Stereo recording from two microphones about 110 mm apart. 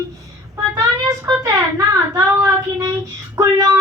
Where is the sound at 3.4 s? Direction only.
30° right (ahead or behind).